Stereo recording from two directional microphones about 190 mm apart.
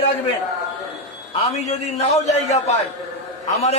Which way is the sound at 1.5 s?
35° left (ahead or behind).